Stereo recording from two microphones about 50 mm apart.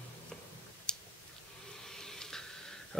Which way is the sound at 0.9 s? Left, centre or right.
Centre.